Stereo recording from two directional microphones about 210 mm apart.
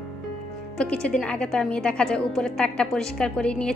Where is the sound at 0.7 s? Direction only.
5° left (ahead or behind).